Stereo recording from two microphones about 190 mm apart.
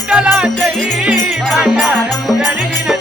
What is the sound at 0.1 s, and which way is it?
Music, 5° right (ahead or behind).